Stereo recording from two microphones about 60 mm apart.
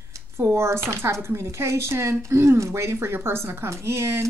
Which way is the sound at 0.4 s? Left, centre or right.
Right.